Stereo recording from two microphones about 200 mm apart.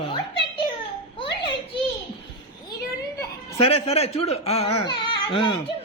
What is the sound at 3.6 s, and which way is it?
Speech, 30° left (ahead or behind).